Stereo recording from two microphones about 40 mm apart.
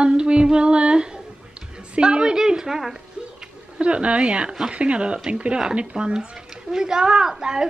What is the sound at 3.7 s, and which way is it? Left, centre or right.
Speech, right.